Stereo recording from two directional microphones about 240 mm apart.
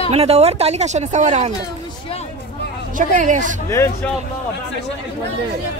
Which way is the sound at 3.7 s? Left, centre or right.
Centre.